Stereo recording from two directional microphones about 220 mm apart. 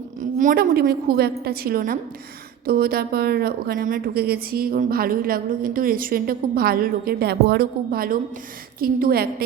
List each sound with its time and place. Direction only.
0.3 s a woman's voice: 40° right (ahead or behind)